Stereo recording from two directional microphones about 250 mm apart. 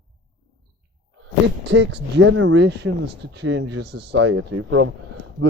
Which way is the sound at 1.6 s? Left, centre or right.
Right.